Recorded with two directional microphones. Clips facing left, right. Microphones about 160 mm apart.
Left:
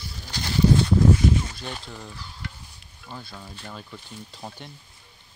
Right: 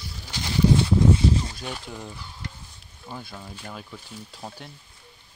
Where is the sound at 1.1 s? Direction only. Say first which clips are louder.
Left 1 dB; 30° right (ahead or behind).